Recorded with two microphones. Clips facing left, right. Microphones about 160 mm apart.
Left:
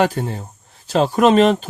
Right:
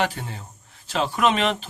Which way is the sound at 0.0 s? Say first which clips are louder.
Left 8 dB; 45° left (ahead or behind).